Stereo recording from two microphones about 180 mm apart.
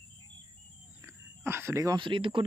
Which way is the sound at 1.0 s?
15° right (ahead or behind).